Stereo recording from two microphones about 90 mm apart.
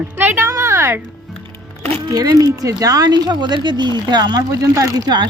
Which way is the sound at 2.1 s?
45° right (ahead or behind).